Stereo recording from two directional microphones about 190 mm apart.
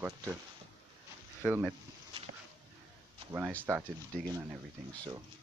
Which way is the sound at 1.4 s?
5° right (ahead or behind).